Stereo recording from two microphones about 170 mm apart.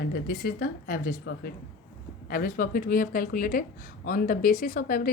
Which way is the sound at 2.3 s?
55° left (ahead or behind).